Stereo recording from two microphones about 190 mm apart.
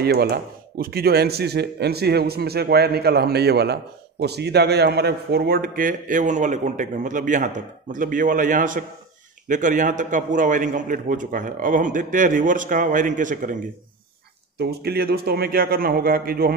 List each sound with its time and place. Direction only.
0.0 s a man's voice: 55° right (ahead or behind)
14.6 s speech: 60° right (ahead or behind)